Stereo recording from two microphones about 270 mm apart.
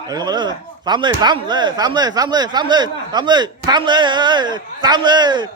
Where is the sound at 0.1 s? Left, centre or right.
Centre.